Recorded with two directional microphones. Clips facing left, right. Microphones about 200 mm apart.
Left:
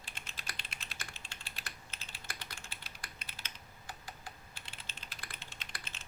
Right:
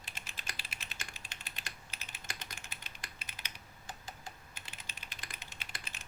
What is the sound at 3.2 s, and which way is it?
Computer keyboard, 20° right (ahead or behind).